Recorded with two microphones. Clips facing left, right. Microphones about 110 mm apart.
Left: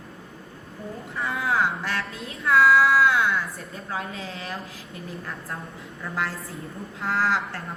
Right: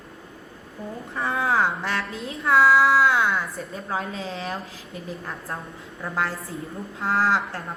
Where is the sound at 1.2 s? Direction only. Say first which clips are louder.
Right 2 dB; 30° right (ahead or behind).